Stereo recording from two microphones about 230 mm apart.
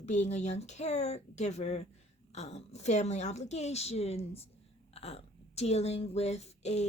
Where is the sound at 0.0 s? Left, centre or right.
Left.